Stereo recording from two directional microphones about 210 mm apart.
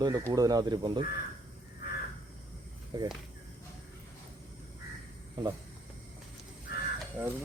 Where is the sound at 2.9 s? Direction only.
20° right (ahead or behind).